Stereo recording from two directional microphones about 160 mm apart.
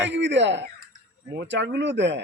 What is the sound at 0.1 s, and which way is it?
Speech, 90° right.